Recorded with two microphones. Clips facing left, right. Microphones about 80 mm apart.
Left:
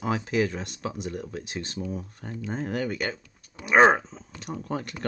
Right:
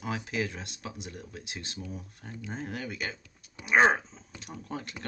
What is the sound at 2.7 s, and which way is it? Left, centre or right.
Speech, left.